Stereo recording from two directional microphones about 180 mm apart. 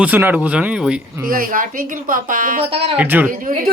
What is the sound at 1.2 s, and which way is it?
Speech, 50° right (ahead or behind).